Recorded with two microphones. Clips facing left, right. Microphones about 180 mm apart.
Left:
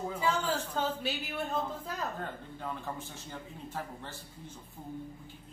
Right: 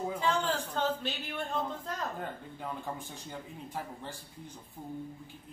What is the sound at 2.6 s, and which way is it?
Speech, 15° right (ahead or behind).